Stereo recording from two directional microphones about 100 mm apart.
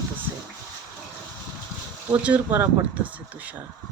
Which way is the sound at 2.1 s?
15° right (ahead or behind).